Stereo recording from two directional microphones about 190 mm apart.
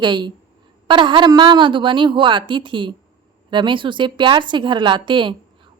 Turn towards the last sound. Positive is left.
turn(degrees=-25)  # may be behind; listen again after turning